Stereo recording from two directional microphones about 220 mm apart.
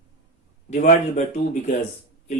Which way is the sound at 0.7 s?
35° left (ahead or behind).